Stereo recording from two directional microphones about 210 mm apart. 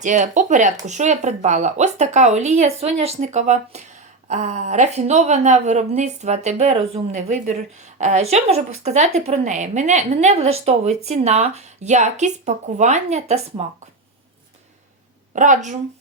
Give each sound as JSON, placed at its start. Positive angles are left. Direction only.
{"t": 0.0, "sound": "speech", "side_deg": -35}
{"t": 15.4, "sound": "speech", "side_deg": -35}